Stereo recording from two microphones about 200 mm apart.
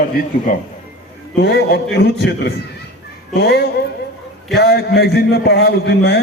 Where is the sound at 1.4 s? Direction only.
55° left (ahead or behind).